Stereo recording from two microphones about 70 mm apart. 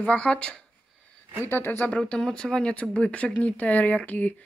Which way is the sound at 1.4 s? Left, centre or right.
Left.